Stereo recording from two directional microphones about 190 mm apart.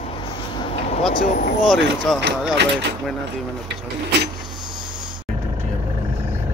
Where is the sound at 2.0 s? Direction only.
Centre (ahead or behind).